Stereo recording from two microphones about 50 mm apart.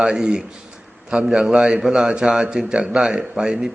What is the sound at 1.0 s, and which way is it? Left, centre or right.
A man's voice, right.